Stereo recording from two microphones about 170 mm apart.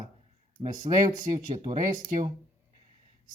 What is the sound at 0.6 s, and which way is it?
Speech, 40° right (ahead or behind).